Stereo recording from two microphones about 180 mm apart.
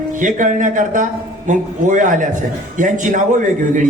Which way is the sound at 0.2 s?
45° right (ahead or behind).